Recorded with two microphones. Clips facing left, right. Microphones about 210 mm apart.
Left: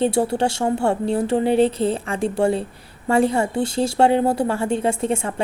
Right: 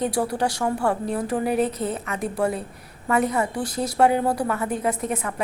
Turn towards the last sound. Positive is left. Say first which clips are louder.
# left 5 dB
turn(degrees=30)  # may be behind; listen again after turning